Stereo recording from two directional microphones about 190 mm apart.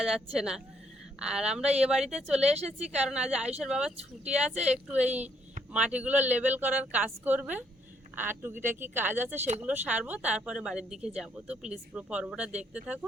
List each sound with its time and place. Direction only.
0.0 s speech: centre (ahead or behind)
2.6 s a woman's voice: 35° right (ahead or behind)
2.9 s a woman's voice: 5° right (ahead or behind)